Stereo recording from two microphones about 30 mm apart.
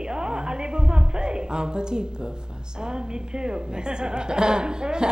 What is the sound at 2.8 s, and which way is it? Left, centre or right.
A woman's voice, right.